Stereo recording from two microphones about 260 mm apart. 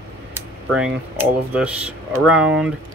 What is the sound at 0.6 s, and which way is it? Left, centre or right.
Speech, centre.